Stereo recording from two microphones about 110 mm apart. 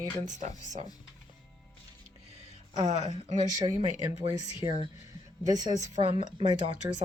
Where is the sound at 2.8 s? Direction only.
90° right.